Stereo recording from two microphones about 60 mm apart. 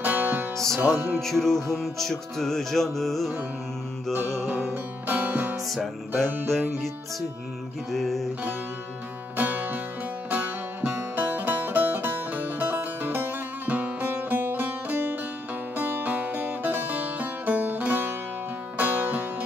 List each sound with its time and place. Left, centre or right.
0.0 s music: right
0.9 s music: right
1.2 s music: centre
4.1 s music: right
5.7 s music: centre
6.2 s music: right
7.9 s music: centre
9.4 s music: right